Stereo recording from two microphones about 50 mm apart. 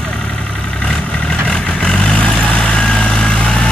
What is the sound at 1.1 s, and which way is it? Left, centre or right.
Vehicle, centre.